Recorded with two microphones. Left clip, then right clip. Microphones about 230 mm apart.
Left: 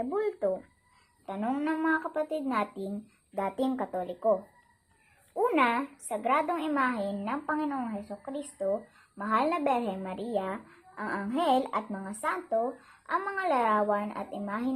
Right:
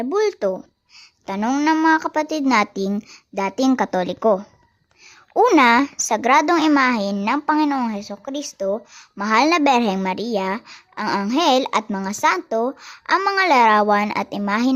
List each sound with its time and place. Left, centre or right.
0.0 s speech: right